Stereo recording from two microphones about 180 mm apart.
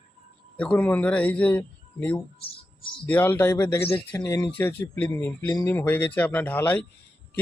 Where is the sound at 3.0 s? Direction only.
10° left (ahead or behind).